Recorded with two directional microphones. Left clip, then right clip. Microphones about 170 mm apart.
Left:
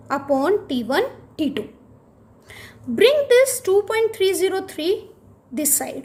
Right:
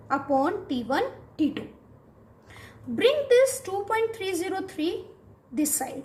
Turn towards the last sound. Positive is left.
turn(degrees=60)  # may be behind; listen again after turning